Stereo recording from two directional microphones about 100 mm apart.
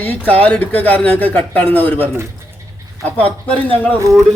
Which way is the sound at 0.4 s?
15° left (ahead or behind).